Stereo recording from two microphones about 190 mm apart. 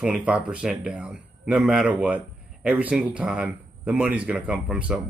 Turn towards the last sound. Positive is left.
turn(degrees=-5)  # may be behind; listen again after turning